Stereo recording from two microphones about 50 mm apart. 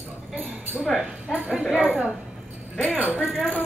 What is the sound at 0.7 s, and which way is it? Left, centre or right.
Speech, centre.